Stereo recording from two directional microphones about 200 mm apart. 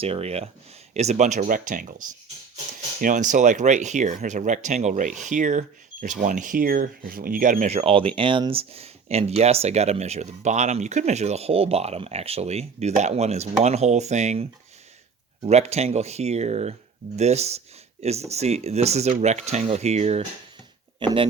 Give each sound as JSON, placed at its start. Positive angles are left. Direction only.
{"t": 0.0, "sound": "speech", "side_deg": -30}
{"t": 3.0, "sound": "speech", "side_deg": -40}
{"t": 15.4, "sound": "speech", "side_deg": -35}